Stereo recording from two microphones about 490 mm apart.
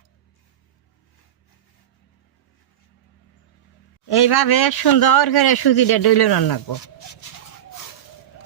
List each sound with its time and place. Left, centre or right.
4.1 s speech: left